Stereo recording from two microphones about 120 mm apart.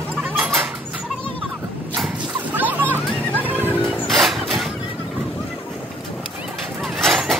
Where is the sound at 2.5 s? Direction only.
15° right (ahead or behind).